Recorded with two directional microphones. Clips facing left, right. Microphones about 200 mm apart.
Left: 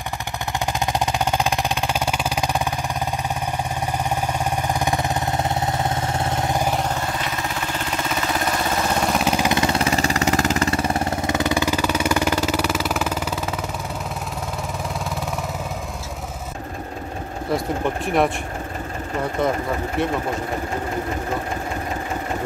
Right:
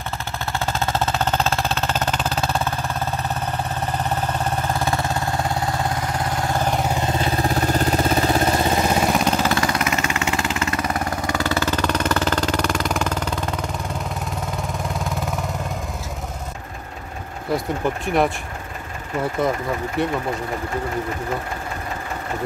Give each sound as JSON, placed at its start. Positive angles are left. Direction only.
{"t": 0.7, "sound": "music", "side_deg": 15}
{"t": 4.0, "sound": "vehicle", "side_deg": 10}
{"t": 6.6, "sound": "vehicle", "side_deg": 0}
{"t": 6.9, "sound": "vehicle", "side_deg": -20}
{"t": 7.2, "sound": "vehicle", "side_deg": -35}
{"t": 8.6, "sound": "vehicle", "side_deg": -15}
{"t": 9.1, "sound": "vehicle", "side_deg": 5}
{"t": 9.5, "sound": "vehicle", "side_deg": 25}
{"t": 15.0, "sound": "vehicle", "side_deg": 0}
{"t": 17.5, "sound": "speech", "side_deg": 0}
{"t": 20.0, "sound": "speech", "side_deg": 0}